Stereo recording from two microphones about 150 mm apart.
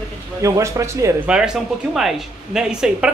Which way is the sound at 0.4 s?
20° right (ahead or behind).